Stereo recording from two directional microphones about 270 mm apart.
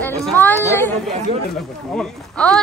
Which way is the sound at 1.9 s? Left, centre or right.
Centre.